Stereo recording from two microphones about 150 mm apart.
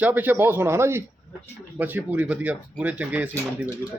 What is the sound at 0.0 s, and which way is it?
Speech, 10° right (ahead or behind).